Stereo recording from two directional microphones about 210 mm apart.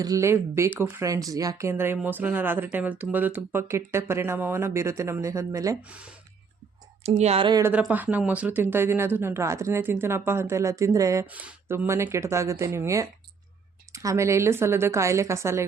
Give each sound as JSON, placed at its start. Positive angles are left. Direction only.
{"t": 0.0, "sound": "speech", "side_deg": -15}
{"t": 7.0, "sound": "speech", "side_deg": -30}
{"t": 7.6, "sound": "speech", "side_deg": -5}